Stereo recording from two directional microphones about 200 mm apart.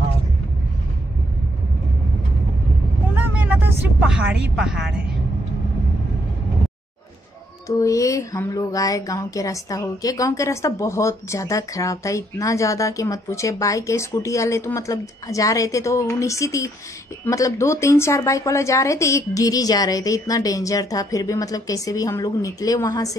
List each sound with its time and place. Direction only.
3.2 s speech: 10° right (ahead or behind)
7.6 s speech: 15° left (ahead or behind)